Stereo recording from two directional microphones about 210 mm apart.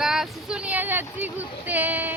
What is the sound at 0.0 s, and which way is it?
Vehicle, centre (ahead or behind).